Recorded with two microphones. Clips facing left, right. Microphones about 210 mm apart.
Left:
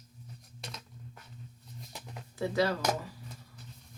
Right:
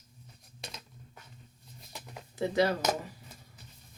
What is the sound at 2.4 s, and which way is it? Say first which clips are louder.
Speech: right 2 dB; 20° right (ahead or behind).